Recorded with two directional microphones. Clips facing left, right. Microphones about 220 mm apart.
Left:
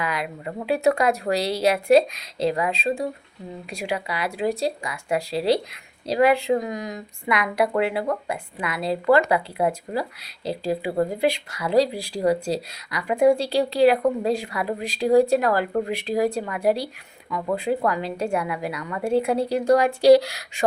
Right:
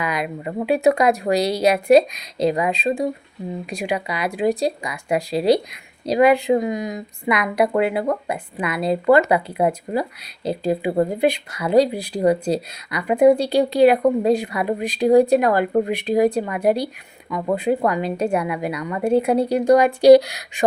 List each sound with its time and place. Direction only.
0.0 s speech: 15° right (ahead or behind)